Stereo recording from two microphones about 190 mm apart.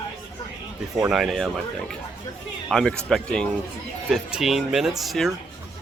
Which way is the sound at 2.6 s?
5° left (ahead or behind).